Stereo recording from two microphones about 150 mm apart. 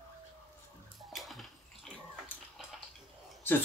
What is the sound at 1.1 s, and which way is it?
Bathtub, centre (ahead or behind).